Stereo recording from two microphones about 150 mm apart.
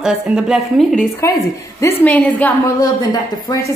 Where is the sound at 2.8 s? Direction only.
25° left (ahead or behind).